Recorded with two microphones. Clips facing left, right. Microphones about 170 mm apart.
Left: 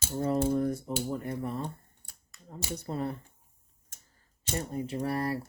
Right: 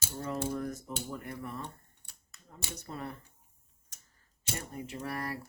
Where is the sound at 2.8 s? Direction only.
30° left (ahead or behind).